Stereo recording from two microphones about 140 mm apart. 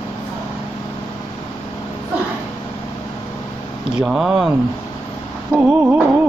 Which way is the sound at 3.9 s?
5° right (ahead or behind).